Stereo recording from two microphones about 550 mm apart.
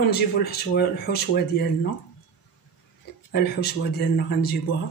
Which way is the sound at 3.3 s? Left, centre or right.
Centre.